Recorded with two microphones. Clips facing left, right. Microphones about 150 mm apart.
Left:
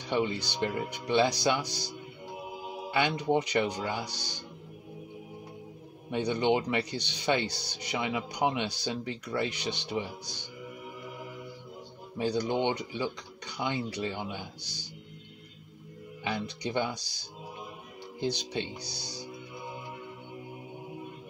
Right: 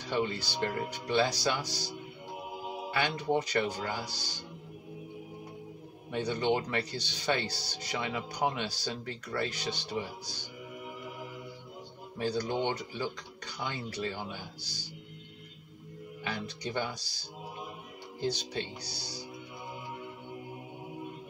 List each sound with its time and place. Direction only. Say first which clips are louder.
0.1 s speech: left 2 dB; 15° left (ahead or behind)
2.9 s speech: left 3 dB; 20° left (ahead or behind)
6.1 s speech: left 3 dB; 20° left (ahead or behind)
12.2 s speech: left 3 dB; 15° left (ahead or behind)
16.3 s speech: left 4 dB; 20° left (ahead or behind)
18.2 s speech: left 2 dB; 20° left (ahead or behind)